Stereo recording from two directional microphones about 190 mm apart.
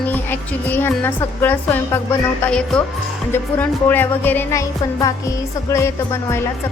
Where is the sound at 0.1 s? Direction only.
10° left (ahead or behind).